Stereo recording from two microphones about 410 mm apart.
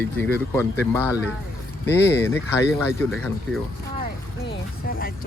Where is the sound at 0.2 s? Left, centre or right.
Centre.